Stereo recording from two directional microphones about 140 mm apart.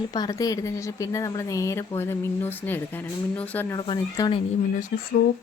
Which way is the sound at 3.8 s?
30° left (ahead or behind).